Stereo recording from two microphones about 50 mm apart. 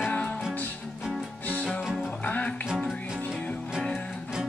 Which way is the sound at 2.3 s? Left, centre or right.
Left.